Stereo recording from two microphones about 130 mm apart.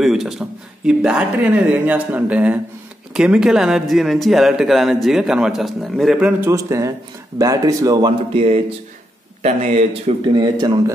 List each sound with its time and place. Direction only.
0.0 s a man's voice: centre (ahead or behind)
6.5 s speech: 25° right (ahead or behind)
8.3 s speech: 45° right (ahead or behind)
10.3 s speech: 35° right (ahead or behind)